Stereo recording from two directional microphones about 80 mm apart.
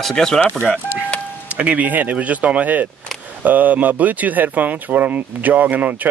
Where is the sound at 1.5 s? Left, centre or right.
Centre.